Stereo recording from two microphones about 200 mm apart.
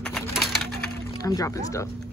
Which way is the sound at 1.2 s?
15° left (ahead or behind).